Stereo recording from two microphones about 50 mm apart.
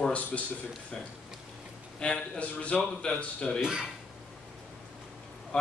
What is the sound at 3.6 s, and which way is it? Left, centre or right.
Speech, centre.